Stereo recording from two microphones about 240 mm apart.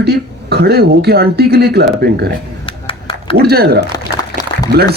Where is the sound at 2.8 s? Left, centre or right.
Left.